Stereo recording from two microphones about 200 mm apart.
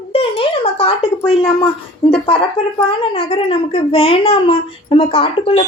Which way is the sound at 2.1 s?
25° left (ahead or behind).